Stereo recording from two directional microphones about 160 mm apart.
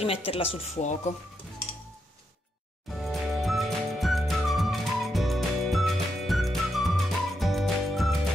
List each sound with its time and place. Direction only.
0.0 s speech: 35° left (ahead or behind)
3.0 s music: centre (ahead or behind)